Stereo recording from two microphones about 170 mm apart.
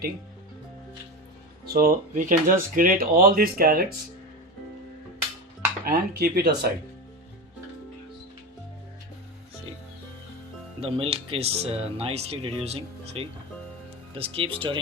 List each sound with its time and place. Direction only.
1.6 s speech: 60° right (ahead or behind)
5.8 s speech: 65° right (ahead or behind)
10.8 s speech: 35° right (ahead or behind)